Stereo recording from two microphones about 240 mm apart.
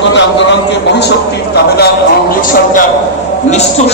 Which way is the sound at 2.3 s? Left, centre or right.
Left.